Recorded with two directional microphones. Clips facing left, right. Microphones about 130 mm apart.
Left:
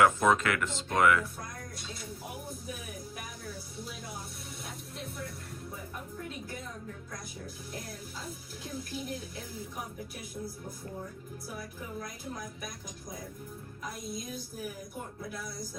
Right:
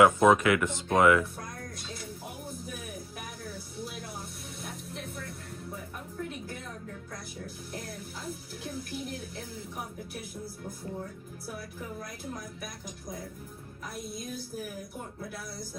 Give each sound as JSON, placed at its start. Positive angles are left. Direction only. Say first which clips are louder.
{"t": 0.0, "sound": "speech", "louder": "right 4 dB", "side_deg": -20}